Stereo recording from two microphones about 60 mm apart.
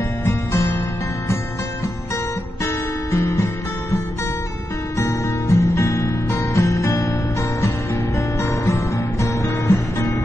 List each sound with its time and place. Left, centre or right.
0.2 s music: left
2.6 s music: left
4.9 s music: left